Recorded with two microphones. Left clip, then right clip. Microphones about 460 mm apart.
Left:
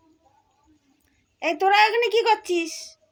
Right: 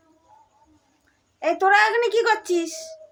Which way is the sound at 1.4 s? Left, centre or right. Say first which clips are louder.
Right 1 dB; left.